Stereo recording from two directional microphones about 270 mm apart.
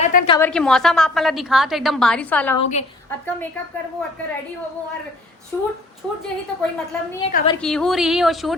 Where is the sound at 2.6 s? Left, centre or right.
Left.